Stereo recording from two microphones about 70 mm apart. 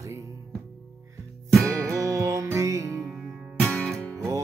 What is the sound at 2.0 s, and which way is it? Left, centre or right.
Music, right.